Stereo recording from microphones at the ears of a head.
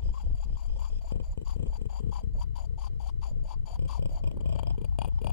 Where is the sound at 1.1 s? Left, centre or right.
Left.